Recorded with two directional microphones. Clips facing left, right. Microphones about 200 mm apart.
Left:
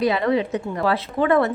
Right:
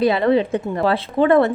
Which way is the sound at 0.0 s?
30° right (ahead or behind).